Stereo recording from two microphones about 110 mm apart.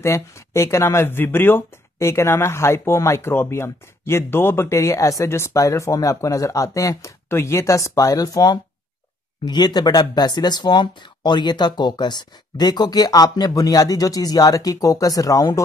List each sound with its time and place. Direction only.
0.0 s speech: 25° left (ahead or behind)